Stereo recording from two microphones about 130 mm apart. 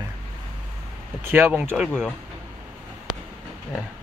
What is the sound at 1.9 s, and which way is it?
Speech, 5° left (ahead or behind).